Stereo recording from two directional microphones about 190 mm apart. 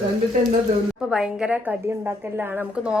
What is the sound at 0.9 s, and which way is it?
A woman's voice, 5° right (ahead or behind).